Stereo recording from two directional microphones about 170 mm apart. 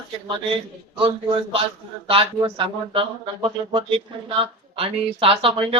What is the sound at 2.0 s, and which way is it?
Speech, 30° right (ahead or behind).